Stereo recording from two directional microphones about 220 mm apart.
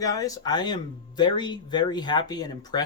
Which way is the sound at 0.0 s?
15° left (ahead or behind).